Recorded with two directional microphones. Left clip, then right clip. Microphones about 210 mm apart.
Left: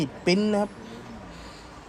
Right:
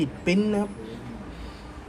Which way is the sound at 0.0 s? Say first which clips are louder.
Left 1 dB; 20° left (ahead or behind).